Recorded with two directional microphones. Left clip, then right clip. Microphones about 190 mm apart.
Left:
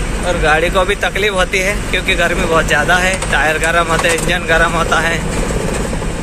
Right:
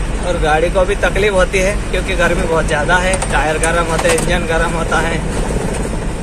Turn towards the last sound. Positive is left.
turn(degrees=0)  # may be behind; listen again after turning